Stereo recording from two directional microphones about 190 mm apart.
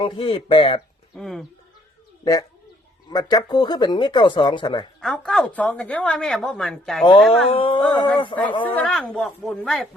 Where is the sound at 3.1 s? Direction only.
20° left (ahead or behind).